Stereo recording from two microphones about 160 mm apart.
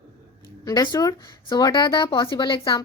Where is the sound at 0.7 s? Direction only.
25° left (ahead or behind).